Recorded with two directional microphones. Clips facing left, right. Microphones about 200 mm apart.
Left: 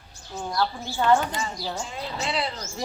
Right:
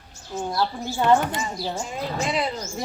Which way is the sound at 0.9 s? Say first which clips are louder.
Right 3 dB; 15° right (ahead or behind).